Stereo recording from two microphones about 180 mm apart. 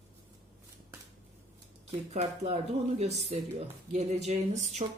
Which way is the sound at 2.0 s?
40° right (ahead or behind).